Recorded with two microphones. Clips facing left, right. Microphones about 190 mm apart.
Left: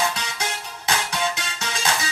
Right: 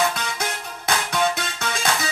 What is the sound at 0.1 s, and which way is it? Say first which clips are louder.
Music: right 2 dB; 55° right (ahead or behind).